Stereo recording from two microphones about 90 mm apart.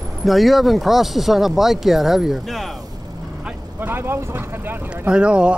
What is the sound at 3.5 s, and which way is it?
Vehicle, 25° right (ahead or behind).